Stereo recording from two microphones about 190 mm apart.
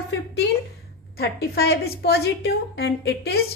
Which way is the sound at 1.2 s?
55° left (ahead or behind).